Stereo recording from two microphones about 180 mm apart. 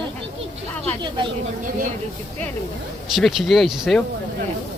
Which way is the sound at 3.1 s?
Centre (ahead or behind).